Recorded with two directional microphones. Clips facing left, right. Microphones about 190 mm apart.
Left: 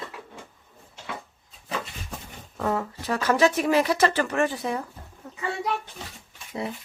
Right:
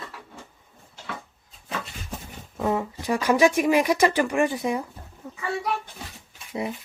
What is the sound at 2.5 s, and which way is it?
Speech, 10° right (ahead or behind).